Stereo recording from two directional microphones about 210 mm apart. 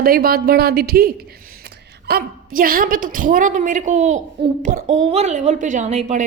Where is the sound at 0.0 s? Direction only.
45° right (ahead or behind).